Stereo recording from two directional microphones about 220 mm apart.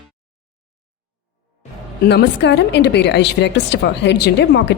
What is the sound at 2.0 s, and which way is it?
A woman's voice, 50° left (ahead or behind).